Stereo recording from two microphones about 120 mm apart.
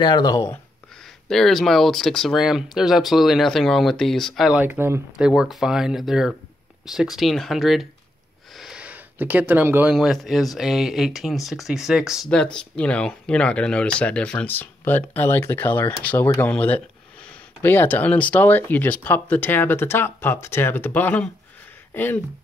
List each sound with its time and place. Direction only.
0.0 s speech: 35° left (ahead or behind)
1.3 s speech: 5° left (ahead or behind); by 5.0 s 20° right (ahead or behind)
5.1 s speech: 5° right (ahead or behind)
12.3 s speech: 5° left (ahead or behind)